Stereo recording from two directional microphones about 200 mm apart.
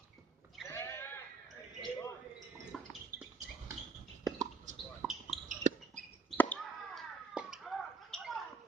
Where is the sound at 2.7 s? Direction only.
Centre (ahead or behind).